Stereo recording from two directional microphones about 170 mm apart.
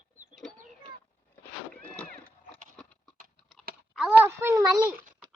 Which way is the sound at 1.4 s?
5° left (ahead or behind).